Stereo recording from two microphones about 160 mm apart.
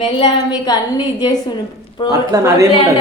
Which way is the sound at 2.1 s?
20° right (ahead or behind).